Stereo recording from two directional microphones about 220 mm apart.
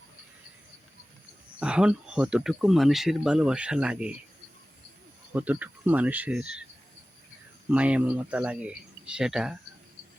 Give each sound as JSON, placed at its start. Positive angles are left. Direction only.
{"t": 1.5, "sound": "speech", "side_deg": -5}
{"t": 5.3, "sound": "speech", "side_deg": -5}
{"t": 7.7, "sound": "speech", "side_deg": -5}